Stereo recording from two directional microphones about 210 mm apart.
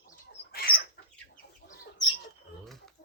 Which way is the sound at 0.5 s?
45° left (ahead or behind).